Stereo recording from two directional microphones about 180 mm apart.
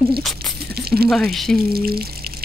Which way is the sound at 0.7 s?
60° right (ahead or behind).